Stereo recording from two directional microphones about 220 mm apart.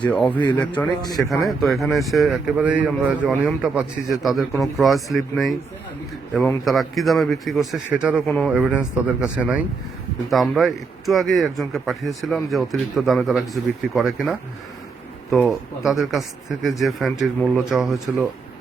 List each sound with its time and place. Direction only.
0.1 s speech: 5° left (ahead or behind)
1.0 s speech: 15° left (ahead or behind)
1.3 s speech: centre (ahead or behind)